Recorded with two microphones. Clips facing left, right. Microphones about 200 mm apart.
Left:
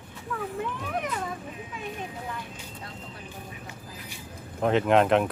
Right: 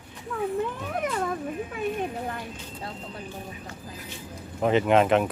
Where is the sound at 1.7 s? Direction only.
55° right (ahead or behind).